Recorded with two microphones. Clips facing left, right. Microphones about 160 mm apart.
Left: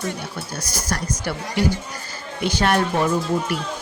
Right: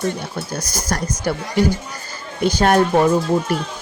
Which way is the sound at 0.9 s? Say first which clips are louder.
Right 4 dB; 45° right (ahead or behind).